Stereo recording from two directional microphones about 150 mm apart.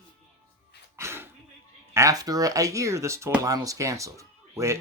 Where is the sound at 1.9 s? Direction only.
25° right (ahead or behind).